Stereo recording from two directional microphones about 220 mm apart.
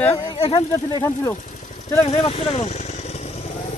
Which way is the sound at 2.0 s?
30° left (ahead or behind).